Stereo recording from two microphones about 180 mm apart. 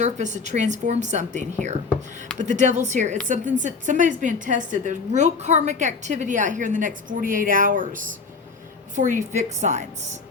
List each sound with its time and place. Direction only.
0.0 s a woman's voice: 40° right (ahead or behind)